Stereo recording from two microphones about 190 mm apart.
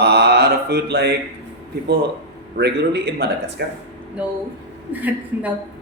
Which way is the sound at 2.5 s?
60° right (ahead or behind).